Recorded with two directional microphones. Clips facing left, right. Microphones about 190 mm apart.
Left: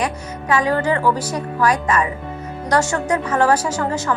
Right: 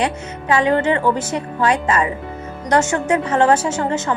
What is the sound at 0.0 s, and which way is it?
A woman's voice, 25° right (ahead or behind).